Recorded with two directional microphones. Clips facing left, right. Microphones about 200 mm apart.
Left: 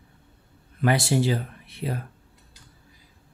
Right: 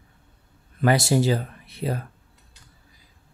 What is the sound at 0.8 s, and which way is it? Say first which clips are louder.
Speech: right 2 dB; 40° right (ahead or behind).